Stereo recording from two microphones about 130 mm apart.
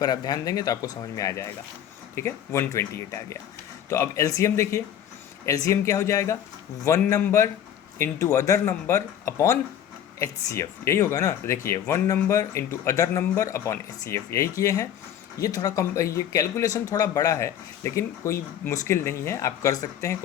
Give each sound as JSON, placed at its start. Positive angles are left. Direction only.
{"t": 0.0, "sound": "speech", "side_deg": 30}